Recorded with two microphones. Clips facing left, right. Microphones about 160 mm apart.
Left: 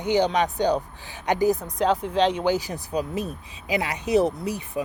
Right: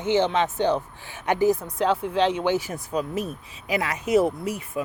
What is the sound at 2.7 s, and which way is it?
A woman's voice, 35° left (ahead or behind).